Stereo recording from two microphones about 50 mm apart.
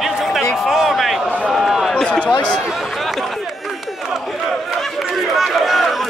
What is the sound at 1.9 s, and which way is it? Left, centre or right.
Speech, centre.